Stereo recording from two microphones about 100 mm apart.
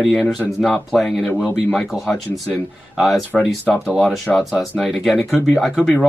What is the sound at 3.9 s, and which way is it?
Speech, centre (ahead or behind).